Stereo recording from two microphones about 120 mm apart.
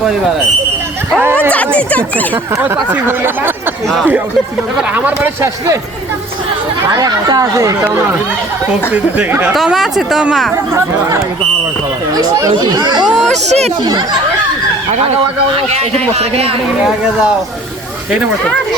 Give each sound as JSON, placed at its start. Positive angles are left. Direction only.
{"t": 1.2, "sound": "a sound", "side_deg": -20}
{"t": 1.5, "sound": "speech", "side_deg": 10}
{"t": 2.9, "sound": "speech", "side_deg": -20}
{"t": 4.9, "sound": "speech", "side_deg": -15}
{"t": 6.8, "sound": "speech", "side_deg": -30}
{"t": 9.1, "sound": "speech", "side_deg": -10}
{"t": 10.5, "sound": "speech", "side_deg": -25}
{"t": 13.3, "sound": "speech", "side_deg": -70}
{"t": 13.8, "sound": "speech", "side_deg": -40}
{"t": 15.5, "sound": "a man's voice", "side_deg": -60}